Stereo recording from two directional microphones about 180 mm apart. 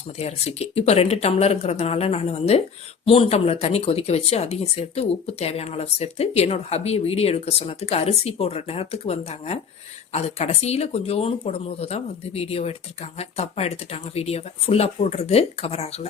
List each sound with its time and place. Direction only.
0.2 s speech: 35° left (ahead or behind)